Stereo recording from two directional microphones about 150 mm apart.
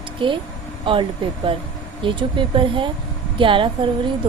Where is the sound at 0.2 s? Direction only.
35° right (ahead or behind).